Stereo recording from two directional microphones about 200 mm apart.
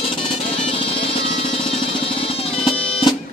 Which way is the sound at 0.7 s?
30° left (ahead or behind).